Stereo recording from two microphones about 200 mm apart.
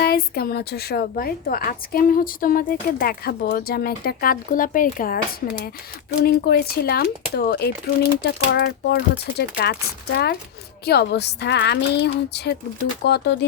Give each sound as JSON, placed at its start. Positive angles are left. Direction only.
{"t": 0.0, "sound": "a woman's voice", "side_deg": 50}
{"t": 10.8, "sound": "a woman's voice", "side_deg": 55}